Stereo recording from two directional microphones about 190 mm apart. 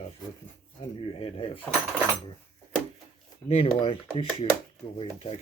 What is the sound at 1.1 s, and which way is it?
Speech, 30° left (ahead or behind).